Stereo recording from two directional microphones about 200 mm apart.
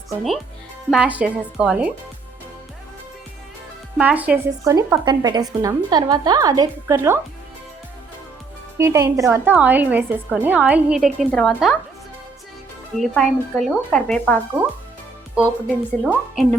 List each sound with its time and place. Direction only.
0.2 s speech: centre (ahead or behind)
3.9 s a woman's voice: 10° right (ahead or behind)
8.8 s a woman's voice: 15° right (ahead or behind); by 11.8 s centre (ahead or behind)
13.0 s speech: centre (ahead or behind)
15.4 s speech: 5° right (ahead or behind)